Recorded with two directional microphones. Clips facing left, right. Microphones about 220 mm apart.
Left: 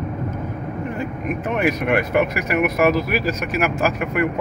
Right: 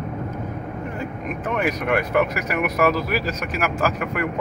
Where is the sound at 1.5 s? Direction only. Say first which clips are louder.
Left 2 dB; 10° left (ahead or behind).